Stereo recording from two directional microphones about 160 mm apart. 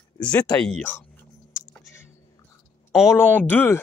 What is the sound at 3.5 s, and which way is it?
Speech, 10° left (ahead or behind).